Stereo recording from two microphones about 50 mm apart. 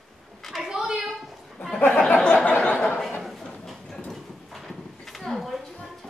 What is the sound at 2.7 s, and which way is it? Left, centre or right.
Chuckle, left.